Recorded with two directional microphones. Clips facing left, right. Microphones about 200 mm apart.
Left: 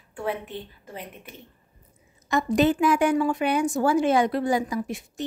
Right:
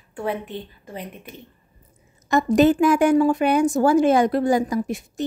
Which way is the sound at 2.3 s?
45° right (ahead or behind).